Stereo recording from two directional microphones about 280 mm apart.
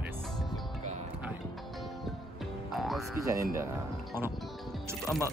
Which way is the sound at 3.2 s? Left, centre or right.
Centre.